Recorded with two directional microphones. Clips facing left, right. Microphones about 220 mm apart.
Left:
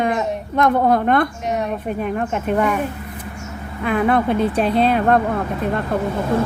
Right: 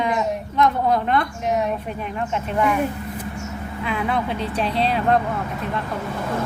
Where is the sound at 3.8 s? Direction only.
50° left (ahead or behind).